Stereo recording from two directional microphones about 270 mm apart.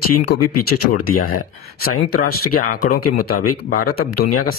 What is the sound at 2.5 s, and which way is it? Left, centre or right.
Speech, left.